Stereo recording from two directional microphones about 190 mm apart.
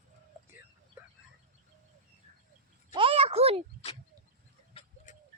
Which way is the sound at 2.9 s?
30° right (ahead or behind).